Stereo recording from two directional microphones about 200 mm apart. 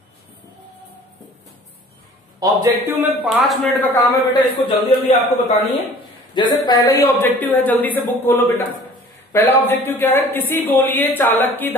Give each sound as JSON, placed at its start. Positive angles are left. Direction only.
{"t": 2.4, "sound": "a man's voice", "side_deg": -15}
{"t": 4.3, "sound": "a man's voice", "side_deg": 25}